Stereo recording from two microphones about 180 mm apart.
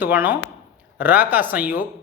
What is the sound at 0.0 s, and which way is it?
Speech, 10° right (ahead or behind).